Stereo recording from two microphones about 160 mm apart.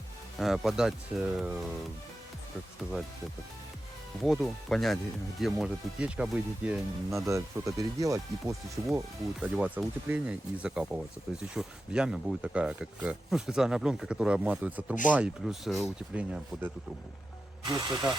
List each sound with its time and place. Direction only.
0.3 s speech: centre (ahead or behind)
4.2 s speech: centre (ahead or behind)
7.3 s speech: 20° right (ahead or behind)
17.7 s speech: 25° right (ahead or behind)